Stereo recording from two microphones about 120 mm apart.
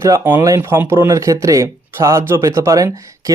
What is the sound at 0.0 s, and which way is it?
Speech, 20° right (ahead or behind).